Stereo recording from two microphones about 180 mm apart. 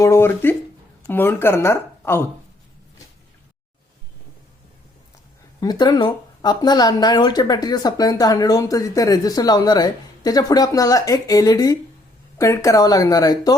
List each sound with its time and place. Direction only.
0.0 s speech: 15° left (ahead or behind)
5.5 s speech: 20° left (ahead or behind)